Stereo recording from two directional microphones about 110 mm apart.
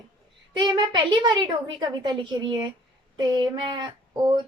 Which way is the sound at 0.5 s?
45° right (ahead or behind).